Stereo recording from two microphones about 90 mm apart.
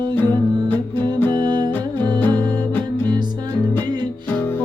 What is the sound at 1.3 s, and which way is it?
Music, 50° right (ahead or behind).